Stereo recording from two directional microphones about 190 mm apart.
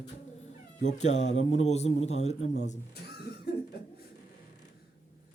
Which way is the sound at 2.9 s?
55° left (ahead or behind).